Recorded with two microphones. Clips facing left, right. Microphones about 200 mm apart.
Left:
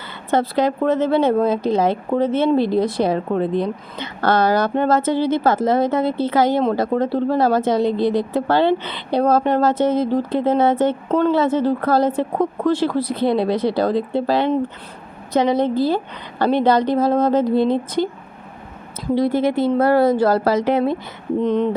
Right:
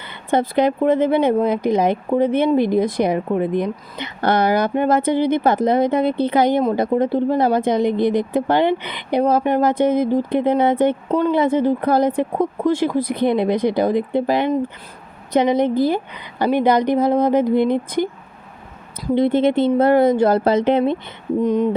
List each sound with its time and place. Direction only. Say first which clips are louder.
0.3 s speech: right 1 dB; 15° right (ahead or behind)
19.1 s speech: right 2 dB; 20° right (ahead or behind)